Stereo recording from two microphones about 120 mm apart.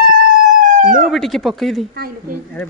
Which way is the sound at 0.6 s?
90° right.